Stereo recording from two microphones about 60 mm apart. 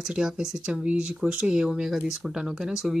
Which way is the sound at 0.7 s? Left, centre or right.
Centre.